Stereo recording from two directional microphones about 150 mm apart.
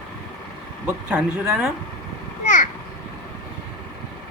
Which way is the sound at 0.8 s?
10° right (ahead or behind).